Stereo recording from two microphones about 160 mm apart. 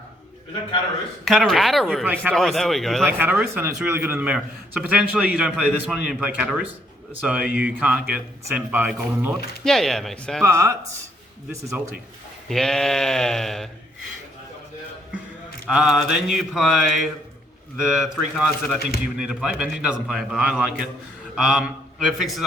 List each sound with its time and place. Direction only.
1.2 s speech: centre (ahead or behind)
3.1 s a man's voice: 10° right (ahead or behind)
10.4 s a man's voice: 20° right (ahead or behind)
12.5 s speech: 5° left (ahead or behind)
15.6 s a man's voice: centre (ahead or behind)